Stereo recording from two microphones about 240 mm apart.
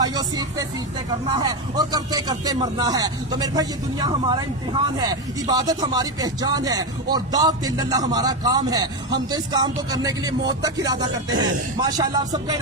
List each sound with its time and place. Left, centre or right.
0.0 s a man's voice: centre